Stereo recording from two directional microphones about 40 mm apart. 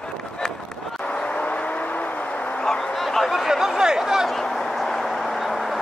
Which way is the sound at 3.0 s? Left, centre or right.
Centre.